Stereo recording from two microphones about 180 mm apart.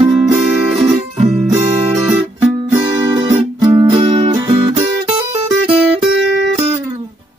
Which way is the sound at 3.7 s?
30° right (ahead or behind).